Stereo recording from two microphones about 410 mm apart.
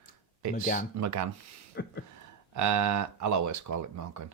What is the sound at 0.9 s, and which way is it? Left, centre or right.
Speech, right.